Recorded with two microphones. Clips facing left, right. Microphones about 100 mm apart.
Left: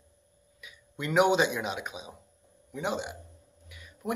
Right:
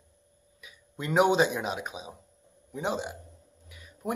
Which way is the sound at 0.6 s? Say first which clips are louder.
Even; 35° right (ahead or behind).